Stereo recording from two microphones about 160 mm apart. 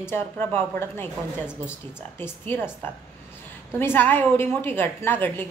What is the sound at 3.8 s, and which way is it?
A woman's voice, 15° left (ahead or behind).